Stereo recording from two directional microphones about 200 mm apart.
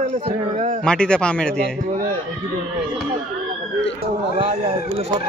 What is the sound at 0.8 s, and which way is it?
Speech, 5° left (ahead or behind).